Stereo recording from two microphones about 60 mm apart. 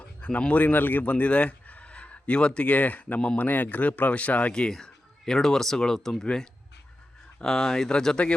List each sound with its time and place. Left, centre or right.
0.0 s a man's voice: left
3.2 s speech: centre
3.4 s speech: left
4.7 s speech: centre